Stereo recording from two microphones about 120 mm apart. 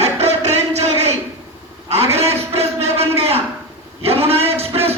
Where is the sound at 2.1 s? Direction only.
60° right (ahead or behind).